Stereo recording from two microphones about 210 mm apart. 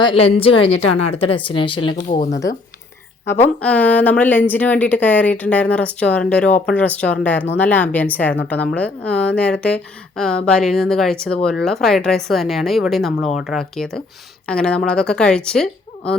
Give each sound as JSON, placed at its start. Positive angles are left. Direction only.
{"t": 0.0, "sound": "a woman's voice", "side_deg": 25}
{"t": 3.2, "sound": "a woman's voice", "side_deg": 5}